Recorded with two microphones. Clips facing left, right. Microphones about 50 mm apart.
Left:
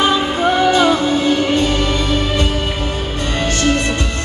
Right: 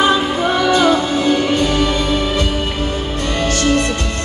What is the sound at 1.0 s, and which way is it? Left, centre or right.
Music, centre.